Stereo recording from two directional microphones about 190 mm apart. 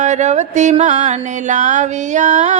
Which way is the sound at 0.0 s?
40° right (ahead or behind).